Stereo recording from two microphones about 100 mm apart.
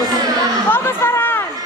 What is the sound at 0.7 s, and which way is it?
Chatter, 25° left (ahead or behind).